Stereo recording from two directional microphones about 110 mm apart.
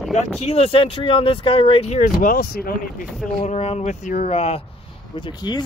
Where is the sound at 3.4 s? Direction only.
80° left.